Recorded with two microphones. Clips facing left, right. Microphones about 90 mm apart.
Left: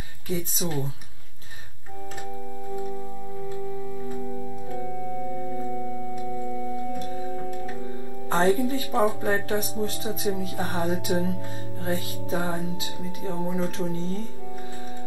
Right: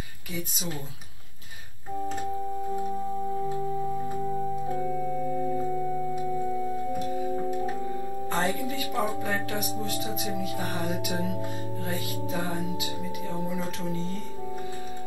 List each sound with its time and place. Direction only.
7.3 s keyboard: 25° right (ahead or behind)
8.3 s speech: 30° left (ahead or behind)